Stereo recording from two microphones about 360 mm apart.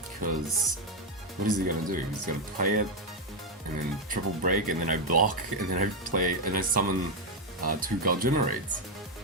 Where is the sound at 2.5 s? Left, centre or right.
Right.